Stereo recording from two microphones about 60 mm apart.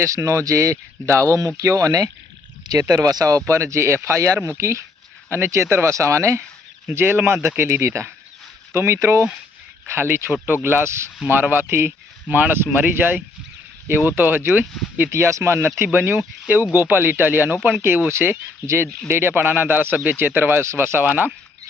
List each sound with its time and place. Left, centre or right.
0.0 s speech: right
3.4 s speech: right
6.9 s speech: right
11.3 s speech: right
15.1 s speech: right
15.8 s speech: right
18.6 s speech: right
19.0 s speech: right